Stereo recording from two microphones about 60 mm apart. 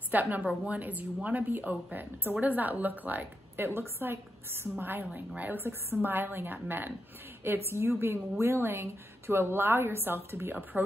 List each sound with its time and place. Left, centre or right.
0.1 s a woman's voice: right